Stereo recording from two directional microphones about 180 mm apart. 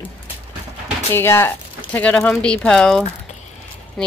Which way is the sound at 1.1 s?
15° left (ahead or behind).